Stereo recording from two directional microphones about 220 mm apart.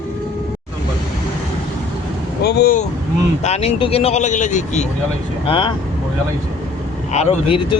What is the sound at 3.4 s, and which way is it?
Speech, 30° left (ahead or behind).